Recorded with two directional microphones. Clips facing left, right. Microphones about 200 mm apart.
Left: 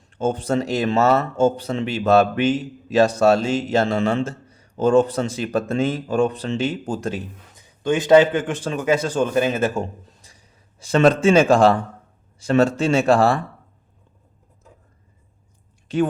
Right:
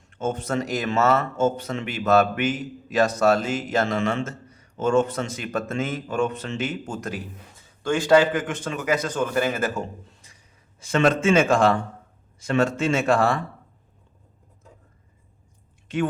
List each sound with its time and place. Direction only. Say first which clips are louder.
0.1 s speech: left 5 dB; 30° left (ahead or behind)
7.5 s a man's voice: left 3 dB; 20° left (ahead or behind); by 13.3 s 35° left (ahead or behind)
15.9 s speech: left 5 dB; 35° left (ahead or behind)